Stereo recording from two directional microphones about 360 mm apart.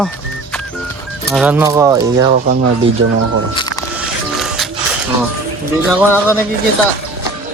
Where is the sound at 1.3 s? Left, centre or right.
Centre.